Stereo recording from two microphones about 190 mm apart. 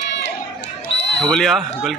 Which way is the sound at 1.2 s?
5° left (ahead or behind).